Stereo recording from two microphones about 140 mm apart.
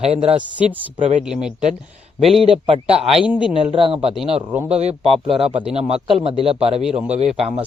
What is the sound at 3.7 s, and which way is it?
A man's voice, 40° right (ahead or behind).